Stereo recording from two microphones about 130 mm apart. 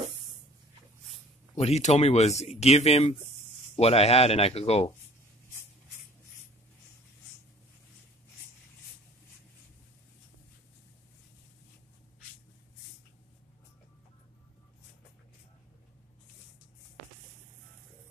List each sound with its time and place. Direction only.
1.6 s speech: 60° left (ahead or behind)